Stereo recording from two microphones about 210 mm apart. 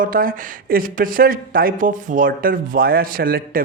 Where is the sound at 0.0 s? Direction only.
40° right (ahead or behind).